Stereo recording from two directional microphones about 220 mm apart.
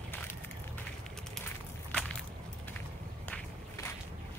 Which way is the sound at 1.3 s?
5° left (ahead or behind).